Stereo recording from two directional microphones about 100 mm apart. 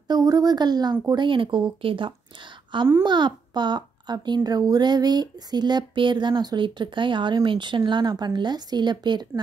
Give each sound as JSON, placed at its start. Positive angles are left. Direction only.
{"t": 0.1, "sound": "a child's voice", "side_deg": -35}
{"t": 3.0, "sound": "a child's voice", "side_deg": -50}